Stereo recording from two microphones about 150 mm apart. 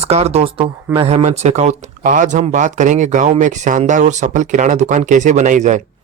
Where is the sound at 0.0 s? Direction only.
45° right (ahead or behind).